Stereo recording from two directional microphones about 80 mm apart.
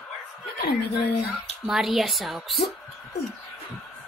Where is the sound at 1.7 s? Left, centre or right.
Centre.